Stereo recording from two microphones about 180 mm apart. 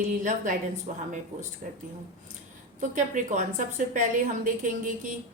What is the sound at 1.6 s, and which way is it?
Speech, 40° right (ahead or behind).